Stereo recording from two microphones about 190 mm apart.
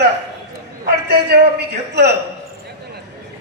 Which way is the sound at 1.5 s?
60° right (ahead or behind).